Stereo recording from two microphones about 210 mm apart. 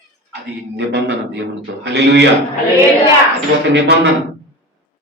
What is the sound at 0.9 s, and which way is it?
A man's voice, 55° right (ahead or behind).